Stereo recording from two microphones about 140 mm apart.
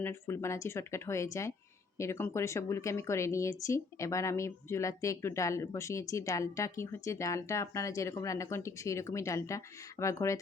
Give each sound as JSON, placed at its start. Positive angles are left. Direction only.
{"t": 0.0, "sound": "speech", "side_deg": 20}